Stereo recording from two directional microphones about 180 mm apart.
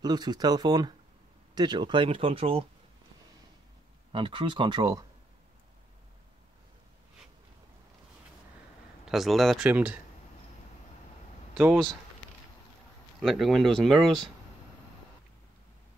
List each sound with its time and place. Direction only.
0.0 s speech: 20° right (ahead or behind)
4.1 s speech: 25° right (ahead or behind)
9.0 s speech: centre (ahead or behind)
11.5 s speech: 5° right (ahead or behind)
13.2 s speech: centre (ahead or behind)